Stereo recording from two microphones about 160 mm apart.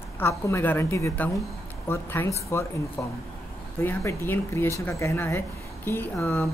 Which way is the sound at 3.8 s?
15° left (ahead or behind).